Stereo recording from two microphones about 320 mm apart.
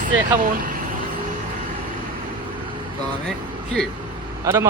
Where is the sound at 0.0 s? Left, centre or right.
Right.